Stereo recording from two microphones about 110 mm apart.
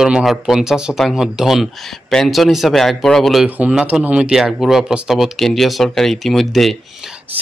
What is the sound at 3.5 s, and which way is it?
Speech, 10° right (ahead or behind).